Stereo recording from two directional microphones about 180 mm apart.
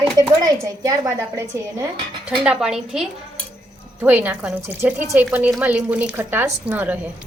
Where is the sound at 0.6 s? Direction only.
20° right (ahead or behind).